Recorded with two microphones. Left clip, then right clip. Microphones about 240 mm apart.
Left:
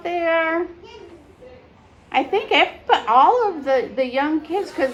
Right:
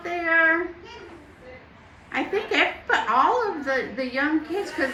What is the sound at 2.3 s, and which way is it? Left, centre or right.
Speech, left.